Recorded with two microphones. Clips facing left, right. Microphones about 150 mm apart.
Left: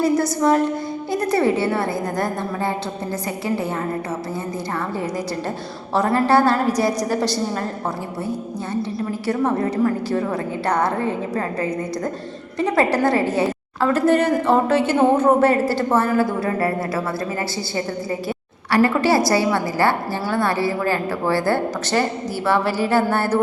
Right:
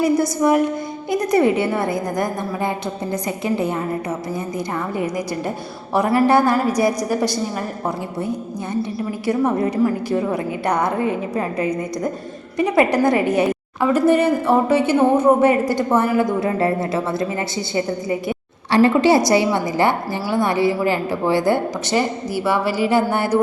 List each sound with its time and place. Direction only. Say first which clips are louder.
0.0 s a woman's voice: right 1 dB; 10° right (ahead or behind)
5.9 s a woman's voice: right 2 dB; 10° right (ahead or behind)
8.7 s a woman's voice: right 1 dB; 15° right (ahead or behind)